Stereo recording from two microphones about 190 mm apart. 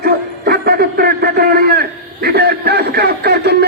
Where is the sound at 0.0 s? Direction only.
55° right (ahead or behind).